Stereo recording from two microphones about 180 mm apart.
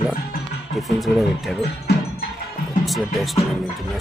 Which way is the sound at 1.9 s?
60° left (ahead or behind).